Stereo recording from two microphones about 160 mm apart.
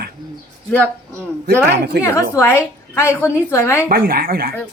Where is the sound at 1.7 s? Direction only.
90° right.